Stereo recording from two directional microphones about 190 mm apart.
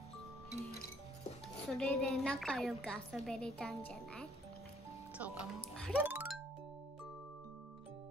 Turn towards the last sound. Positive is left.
turn(degrees=-5)  # may be behind; listen again after turning